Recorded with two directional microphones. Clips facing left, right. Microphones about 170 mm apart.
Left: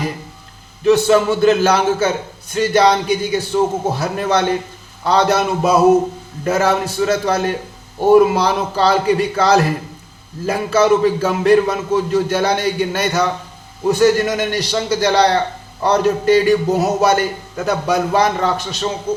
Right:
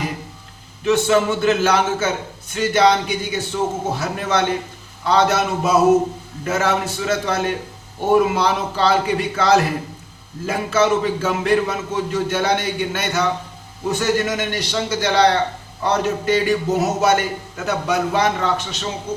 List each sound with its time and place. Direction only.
0.9 s a man's voice: 35° left (ahead or behind)